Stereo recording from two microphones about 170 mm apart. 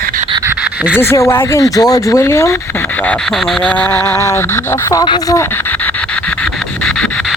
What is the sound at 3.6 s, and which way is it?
Speech, 5° left (ahead or behind).